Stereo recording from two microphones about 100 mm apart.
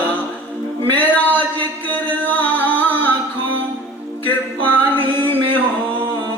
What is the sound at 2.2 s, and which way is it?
Singing, 20° left (ahead or behind).